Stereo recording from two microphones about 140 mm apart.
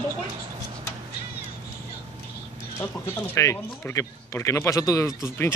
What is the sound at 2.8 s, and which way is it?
Speech, 15° left (ahead or behind).